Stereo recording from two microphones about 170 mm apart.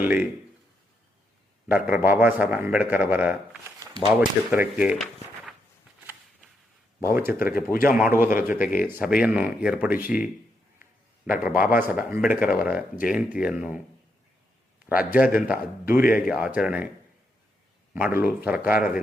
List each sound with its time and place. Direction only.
0.0 s speech: 10° right (ahead or behind)
1.6 s a man's voice: 10° right (ahead or behind)
7.0 s speech: 15° right (ahead or behind)
7.3 s speech: 60° left (ahead or behind)
7.9 s speech: 10° right (ahead or behind)
11.3 s speech: 5° right (ahead or behind)
14.8 s speech: 10° right (ahead or behind)
17.9 s speech: 10° right (ahead or behind)
18.7 s speech: 55° left (ahead or behind)